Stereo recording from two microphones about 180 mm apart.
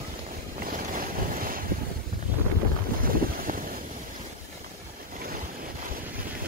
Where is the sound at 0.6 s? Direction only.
50° right (ahead or behind).